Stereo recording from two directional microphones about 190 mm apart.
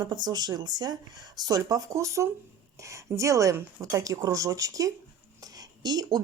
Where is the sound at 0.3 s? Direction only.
20° right (ahead or behind).